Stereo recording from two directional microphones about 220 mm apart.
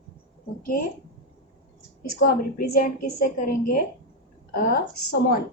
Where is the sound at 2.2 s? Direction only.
45° left (ahead or behind).